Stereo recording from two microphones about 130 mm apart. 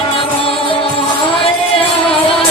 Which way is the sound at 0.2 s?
45° left (ahead or behind).